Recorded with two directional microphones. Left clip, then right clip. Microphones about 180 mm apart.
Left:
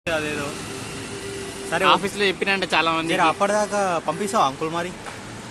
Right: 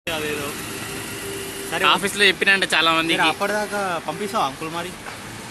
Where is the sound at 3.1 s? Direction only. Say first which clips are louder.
Left 1 dB; 40° left (ahead or behind).